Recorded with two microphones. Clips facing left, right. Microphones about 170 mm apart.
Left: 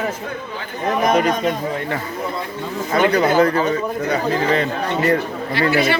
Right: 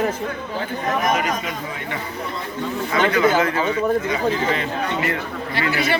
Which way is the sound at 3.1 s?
35° left (ahead or behind).